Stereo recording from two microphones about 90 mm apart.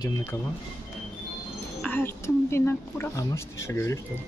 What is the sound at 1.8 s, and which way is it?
A woman's voice, 25° left (ahead or behind).